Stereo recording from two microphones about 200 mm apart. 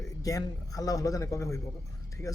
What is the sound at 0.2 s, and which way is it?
Speech, 15° left (ahead or behind).